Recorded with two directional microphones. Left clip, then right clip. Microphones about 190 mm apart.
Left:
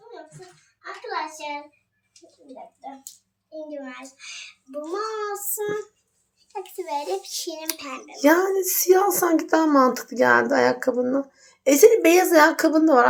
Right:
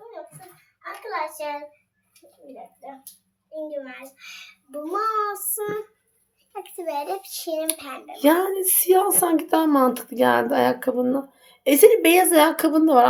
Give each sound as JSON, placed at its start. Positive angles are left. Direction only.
{"t": 3.7, "sound": "child singing", "side_deg": -15}
{"t": 6.5, "sound": "a child's voice", "side_deg": -5}